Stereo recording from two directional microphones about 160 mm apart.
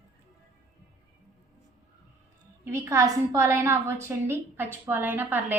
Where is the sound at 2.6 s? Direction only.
15° right (ahead or behind).